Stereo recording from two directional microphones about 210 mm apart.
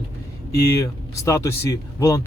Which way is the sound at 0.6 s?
15° left (ahead or behind).